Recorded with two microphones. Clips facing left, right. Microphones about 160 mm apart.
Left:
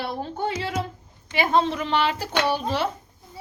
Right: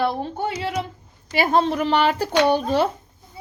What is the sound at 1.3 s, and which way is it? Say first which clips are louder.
Speech: right 2 dB; 40° right (ahead or behind).